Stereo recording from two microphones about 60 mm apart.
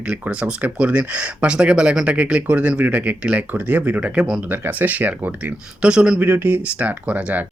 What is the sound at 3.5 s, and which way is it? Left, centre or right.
Speech, right.